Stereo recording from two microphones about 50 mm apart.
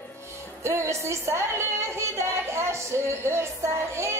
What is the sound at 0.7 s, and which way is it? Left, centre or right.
Speech, right.